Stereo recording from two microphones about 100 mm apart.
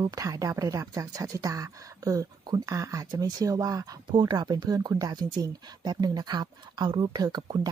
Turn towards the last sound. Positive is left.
turn(degrees=-45)  # may be behind; listen again after turning